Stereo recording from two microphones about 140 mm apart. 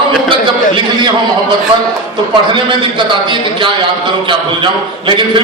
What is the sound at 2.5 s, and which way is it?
A man's voice, 35° right (ahead or behind).